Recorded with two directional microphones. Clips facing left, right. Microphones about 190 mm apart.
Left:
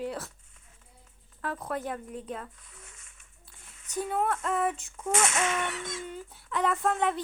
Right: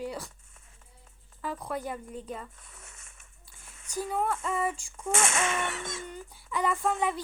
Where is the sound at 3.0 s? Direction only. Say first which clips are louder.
Right 3 dB; 45° right (ahead or behind).